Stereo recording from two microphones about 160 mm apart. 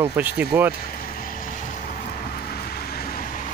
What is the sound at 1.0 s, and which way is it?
Vehicle, 60° left (ahead or behind).